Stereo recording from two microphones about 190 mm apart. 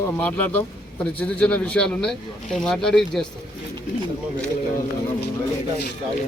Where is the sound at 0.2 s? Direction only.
10° left (ahead or behind).